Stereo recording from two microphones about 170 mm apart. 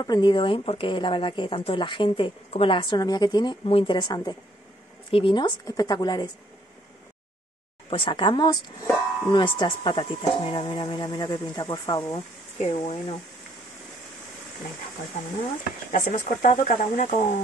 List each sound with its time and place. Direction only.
0.0 s speech: 25° left (ahead or behind)
7.9 s speech: 30° left (ahead or behind)
12.5 s speech: 40° left (ahead or behind)
15.9 s speech: 50° left (ahead or behind)